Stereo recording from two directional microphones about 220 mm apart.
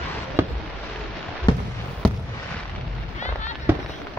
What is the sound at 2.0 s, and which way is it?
Fireworks, 5° left (ahead or behind).